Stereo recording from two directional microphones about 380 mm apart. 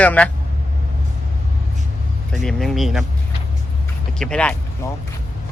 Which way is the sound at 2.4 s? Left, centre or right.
Centre.